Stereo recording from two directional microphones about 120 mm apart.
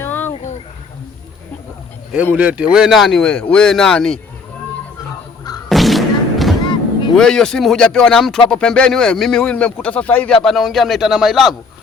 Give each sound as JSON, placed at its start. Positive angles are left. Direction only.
{"t": 0.0, "sound": "a sound", "side_deg": 20}
{"t": 0.3, "sound": "a sound", "side_deg": 65}
{"t": 2.3, "sound": "speech", "side_deg": -15}
{"t": 5.6, "sound": "thump", "side_deg": 0}
{"t": 7.2, "sound": "speech", "side_deg": 5}
{"t": 10.4, "sound": "speech", "side_deg": 0}